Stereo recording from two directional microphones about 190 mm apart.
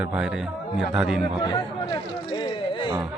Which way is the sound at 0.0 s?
5° right (ahead or behind).